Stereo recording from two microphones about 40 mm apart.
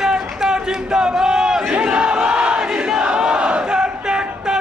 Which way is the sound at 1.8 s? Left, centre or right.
Right.